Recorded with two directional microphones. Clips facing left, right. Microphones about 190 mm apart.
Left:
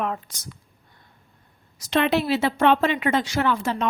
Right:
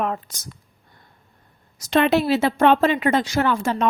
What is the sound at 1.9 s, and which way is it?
Speech, 45° right (ahead or behind).